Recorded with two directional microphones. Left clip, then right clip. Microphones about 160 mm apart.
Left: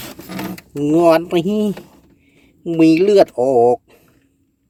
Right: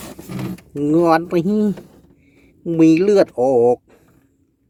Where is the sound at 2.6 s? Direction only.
5° right (ahead or behind).